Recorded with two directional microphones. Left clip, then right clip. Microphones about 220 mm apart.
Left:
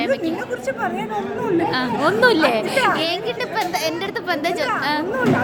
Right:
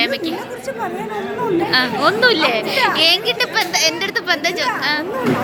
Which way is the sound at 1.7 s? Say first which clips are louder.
Right 4 dB; 10° left (ahead or behind).